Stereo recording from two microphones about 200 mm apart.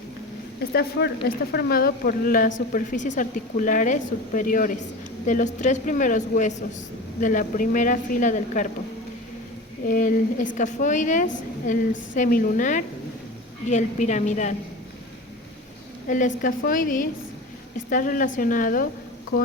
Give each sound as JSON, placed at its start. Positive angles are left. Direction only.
{"t": 0.7, "sound": "a woman's voice", "side_deg": 55}
{"t": 9.8, "sound": "a woman's voice", "side_deg": 40}
{"t": 16.0, "sound": "speech", "side_deg": 40}